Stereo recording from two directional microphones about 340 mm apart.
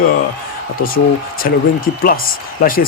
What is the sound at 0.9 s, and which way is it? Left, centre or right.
Speech, left.